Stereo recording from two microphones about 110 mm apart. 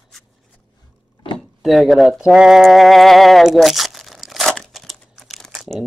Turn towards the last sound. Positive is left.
turn(degrees=5)  # may be behind; listen again after turning